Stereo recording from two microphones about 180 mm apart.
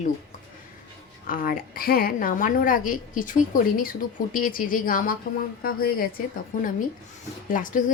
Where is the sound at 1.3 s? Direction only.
50° left (ahead or behind).